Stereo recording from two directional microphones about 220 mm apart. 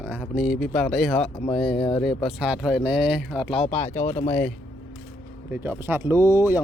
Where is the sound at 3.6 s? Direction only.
30° left (ahead or behind).